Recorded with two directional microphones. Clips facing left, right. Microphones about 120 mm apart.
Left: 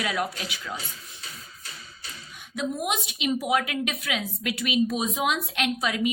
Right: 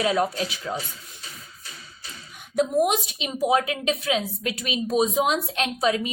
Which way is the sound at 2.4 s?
45° right (ahead or behind).